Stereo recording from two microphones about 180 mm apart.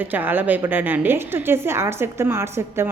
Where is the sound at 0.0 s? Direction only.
10° right (ahead or behind).